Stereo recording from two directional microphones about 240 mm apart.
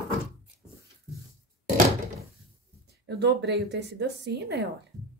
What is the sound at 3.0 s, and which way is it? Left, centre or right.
A woman's voice, right.